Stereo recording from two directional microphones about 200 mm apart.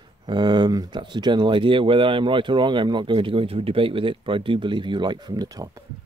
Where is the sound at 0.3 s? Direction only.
20° right (ahead or behind).